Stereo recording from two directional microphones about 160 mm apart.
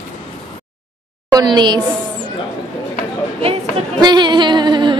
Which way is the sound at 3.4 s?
30° right (ahead or behind).